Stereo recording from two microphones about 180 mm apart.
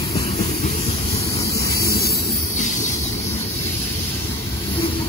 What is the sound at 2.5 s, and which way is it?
Train, 40° left (ahead or behind).